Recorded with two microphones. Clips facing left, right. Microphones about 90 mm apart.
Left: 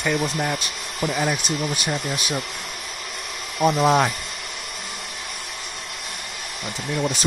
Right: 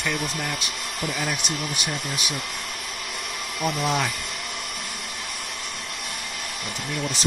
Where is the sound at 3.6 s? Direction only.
40° left (ahead or behind).